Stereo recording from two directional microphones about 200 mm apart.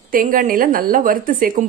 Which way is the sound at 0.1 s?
45° right (ahead or behind).